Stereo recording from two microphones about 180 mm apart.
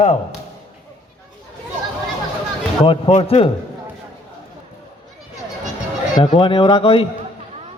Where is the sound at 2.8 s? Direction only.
35° left (ahead or behind).